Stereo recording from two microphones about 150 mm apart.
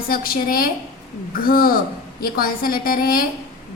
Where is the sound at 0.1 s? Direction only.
75° left (ahead or behind).